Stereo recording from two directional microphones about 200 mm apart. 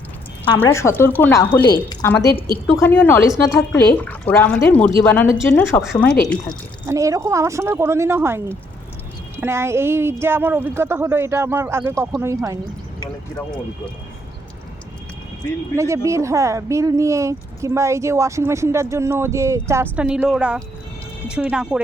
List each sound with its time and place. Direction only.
0.6 s speech: 15° left (ahead or behind)
6.8 s a woman's voice: 15° right (ahead or behind)
15.7 s a woman's voice: 15° right (ahead or behind)